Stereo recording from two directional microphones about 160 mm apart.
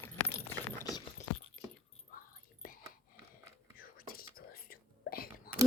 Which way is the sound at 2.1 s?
60° left (ahead or behind).